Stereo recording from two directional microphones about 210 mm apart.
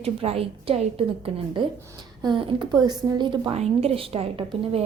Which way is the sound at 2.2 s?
20° right (ahead or behind).